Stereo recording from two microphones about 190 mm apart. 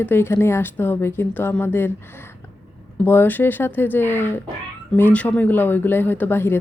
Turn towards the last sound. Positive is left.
turn(degrees=10)  # may be behind; listen again after turning